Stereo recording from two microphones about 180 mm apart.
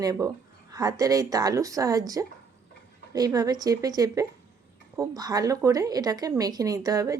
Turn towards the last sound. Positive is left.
turn(degrees=-20)  # may be behind; listen again after turning